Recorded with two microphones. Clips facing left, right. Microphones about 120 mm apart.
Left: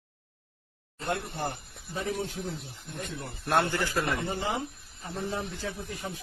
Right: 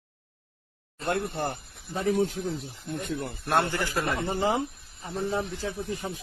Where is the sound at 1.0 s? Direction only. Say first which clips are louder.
Right 4 dB; 65° right (ahead or behind).